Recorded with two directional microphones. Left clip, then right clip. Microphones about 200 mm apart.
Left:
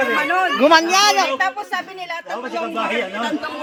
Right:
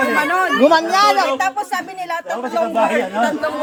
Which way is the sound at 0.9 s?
50° left (ahead or behind).